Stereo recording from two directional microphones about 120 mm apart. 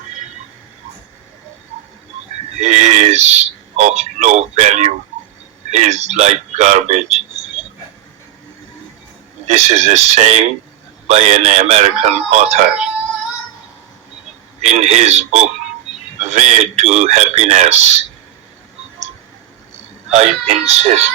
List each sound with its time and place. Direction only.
2.6 s a sound: 70° right (ahead or behind)
5.7 s speech: 65° right (ahead or behind)
9.5 s a man's voice: 70° right (ahead or behind)
14.6 s a man's voice: 70° right (ahead or behind)
20.1 s a man's voice: 70° right (ahead or behind)